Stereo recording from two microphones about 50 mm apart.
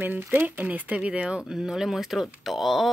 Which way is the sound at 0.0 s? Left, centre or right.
Right.